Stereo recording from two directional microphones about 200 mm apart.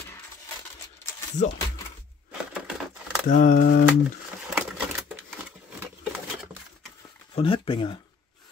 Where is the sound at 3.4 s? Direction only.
45° left (ahead or behind).